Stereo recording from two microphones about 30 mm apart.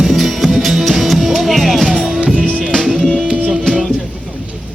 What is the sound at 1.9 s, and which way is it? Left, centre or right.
Music, centre.